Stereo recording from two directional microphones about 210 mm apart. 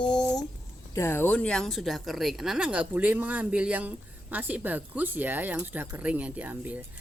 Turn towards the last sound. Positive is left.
turn(degrees=-10)  # may be behind; listen again after turning